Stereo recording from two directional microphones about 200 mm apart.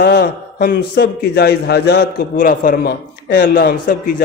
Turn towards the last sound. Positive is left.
turn(degrees=45)  # may be behind; listen again after turning